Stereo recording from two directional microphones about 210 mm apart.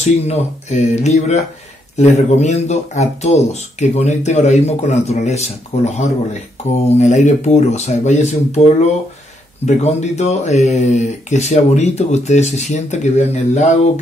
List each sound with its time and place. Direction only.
0.0 s speech: 30° left (ahead or behind)